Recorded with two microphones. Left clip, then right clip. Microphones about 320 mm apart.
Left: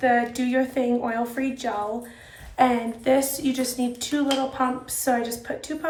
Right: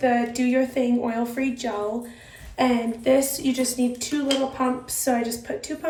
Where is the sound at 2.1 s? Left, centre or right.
Left.